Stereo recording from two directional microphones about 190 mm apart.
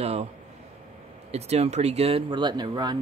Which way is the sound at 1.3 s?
35° right (ahead or behind).